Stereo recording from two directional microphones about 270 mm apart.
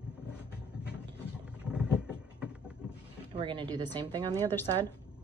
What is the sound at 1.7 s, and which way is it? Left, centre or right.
Vehicle, centre.